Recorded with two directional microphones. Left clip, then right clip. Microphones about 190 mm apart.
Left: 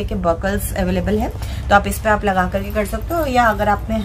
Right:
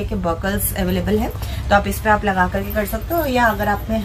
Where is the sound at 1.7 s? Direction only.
45° left (ahead or behind).